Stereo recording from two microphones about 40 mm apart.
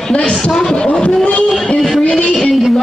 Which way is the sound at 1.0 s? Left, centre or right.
Left.